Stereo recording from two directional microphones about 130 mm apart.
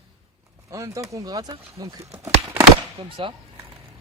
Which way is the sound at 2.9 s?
40° right (ahead or behind).